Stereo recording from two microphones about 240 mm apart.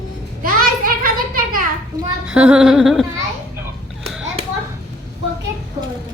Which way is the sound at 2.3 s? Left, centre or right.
Centre.